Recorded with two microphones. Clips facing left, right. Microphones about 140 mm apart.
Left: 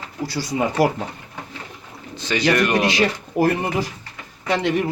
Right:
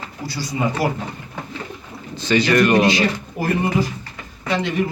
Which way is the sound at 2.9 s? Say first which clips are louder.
Left 1 dB; 70° left (ahead or behind).